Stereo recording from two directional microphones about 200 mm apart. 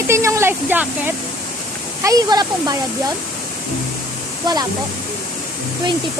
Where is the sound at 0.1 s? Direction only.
15° right (ahead or behind).